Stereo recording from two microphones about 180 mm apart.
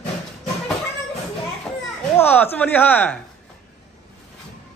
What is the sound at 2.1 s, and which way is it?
A woman's voice, 10° left (ahead or behind).